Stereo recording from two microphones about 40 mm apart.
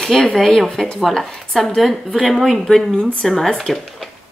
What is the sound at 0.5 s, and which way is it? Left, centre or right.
Speech, centre.